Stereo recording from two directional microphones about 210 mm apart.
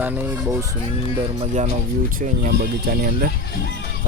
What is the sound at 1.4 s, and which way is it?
Speech, 30° right (ahead or behind).